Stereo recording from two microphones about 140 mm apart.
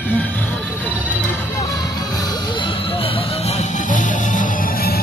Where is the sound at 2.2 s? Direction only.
35° left (ahead or behind).